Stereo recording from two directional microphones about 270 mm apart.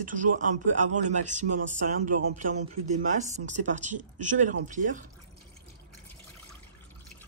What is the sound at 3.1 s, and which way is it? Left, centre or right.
Speech, right.